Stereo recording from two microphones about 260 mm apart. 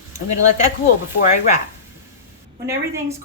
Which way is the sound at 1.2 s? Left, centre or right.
Left.